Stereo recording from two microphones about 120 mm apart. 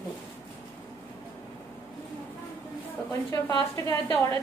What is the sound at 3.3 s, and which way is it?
Speech, 25° left (ahead or behind).